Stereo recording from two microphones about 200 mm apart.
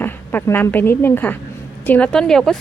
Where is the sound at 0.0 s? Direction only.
10° left (ahead or behind).